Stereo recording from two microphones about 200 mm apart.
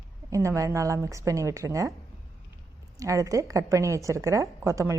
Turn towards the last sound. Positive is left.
turn(degrees=-15)  # may be behind; listen again after turning